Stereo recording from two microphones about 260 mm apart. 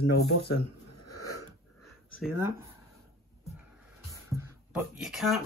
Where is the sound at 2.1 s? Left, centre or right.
Centre.